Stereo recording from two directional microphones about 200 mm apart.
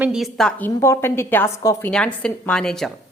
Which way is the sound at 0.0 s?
Centre (ahead or behind).